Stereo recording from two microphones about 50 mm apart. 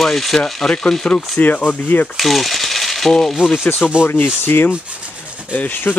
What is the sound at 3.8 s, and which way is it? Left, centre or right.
Speech, left.